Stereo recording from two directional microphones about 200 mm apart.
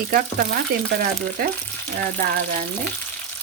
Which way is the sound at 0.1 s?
50° right (ahead or behind).